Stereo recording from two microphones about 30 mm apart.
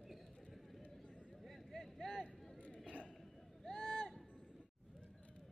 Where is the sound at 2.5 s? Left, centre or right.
Left.